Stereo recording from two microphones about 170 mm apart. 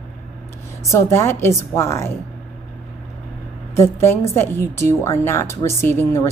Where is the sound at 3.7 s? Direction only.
15° left (ahead or behind).